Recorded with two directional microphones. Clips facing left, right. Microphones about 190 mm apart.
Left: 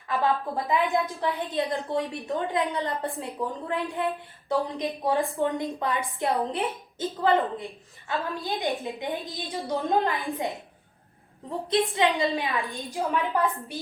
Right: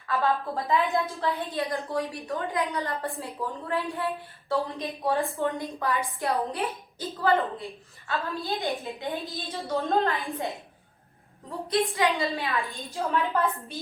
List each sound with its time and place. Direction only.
0.1 s a woman's voice: 15° left (ahead or behind)